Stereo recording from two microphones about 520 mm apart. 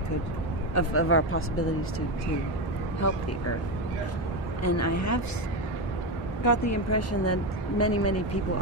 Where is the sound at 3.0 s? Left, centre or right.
Left.